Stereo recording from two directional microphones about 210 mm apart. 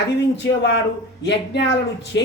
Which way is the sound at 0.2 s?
55° left (ahead or behind).